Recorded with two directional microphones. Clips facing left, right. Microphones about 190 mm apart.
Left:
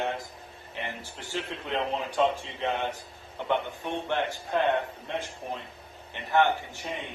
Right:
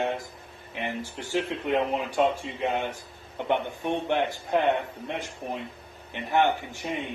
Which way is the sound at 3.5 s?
15° right (ahead or behind).